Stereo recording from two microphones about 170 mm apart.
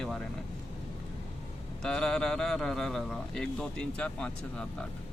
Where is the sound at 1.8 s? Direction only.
5° left (ahead or behind).